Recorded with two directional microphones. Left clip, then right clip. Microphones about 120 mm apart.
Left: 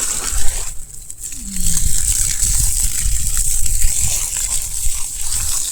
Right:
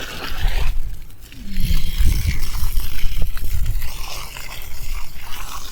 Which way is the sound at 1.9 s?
30° left (ahead or behind).